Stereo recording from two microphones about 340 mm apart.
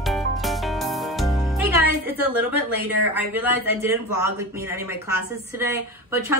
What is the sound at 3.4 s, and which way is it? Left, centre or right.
Speech, centre.